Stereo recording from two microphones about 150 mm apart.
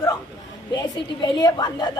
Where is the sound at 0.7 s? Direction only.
25° left (ahead or behind).